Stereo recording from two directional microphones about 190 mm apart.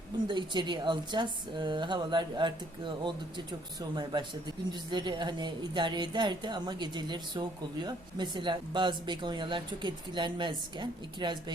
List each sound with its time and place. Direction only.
0.3 s a woman's voice: 25° right (ahead or behind)